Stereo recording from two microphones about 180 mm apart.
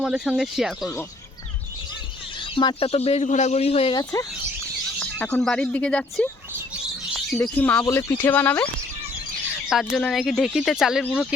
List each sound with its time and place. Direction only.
0.0 s speech: 5° right (ahead or behind)
2.4 s speech: 25° left (ahead or behind)
4.9 s speech: 5° left (ahead or behind)
9.6 s speech: centre (ahead or behind)